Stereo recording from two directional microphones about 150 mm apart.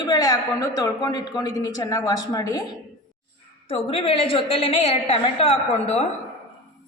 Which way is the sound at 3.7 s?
40° left (ahead or behind).